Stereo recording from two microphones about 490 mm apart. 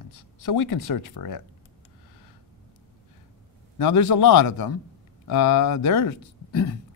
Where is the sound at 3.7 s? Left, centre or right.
Left.